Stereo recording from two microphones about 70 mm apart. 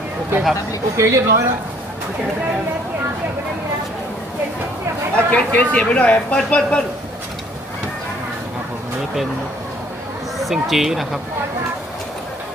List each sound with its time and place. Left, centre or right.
0.9 s speech: right
5.1 s speech: left
10.3 s speech: centre